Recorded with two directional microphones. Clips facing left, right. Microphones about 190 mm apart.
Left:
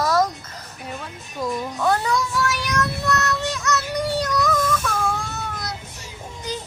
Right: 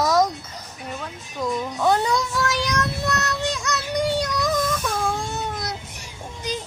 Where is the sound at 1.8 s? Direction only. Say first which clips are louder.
Right 1 dB; 15° right (ahead or behind).